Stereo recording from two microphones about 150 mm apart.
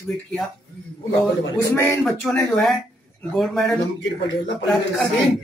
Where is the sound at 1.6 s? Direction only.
15° left (ahead or behind).